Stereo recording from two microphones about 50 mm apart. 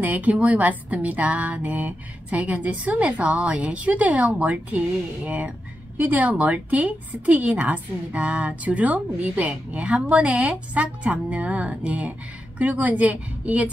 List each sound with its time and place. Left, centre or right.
0.0 s a woman's voice: right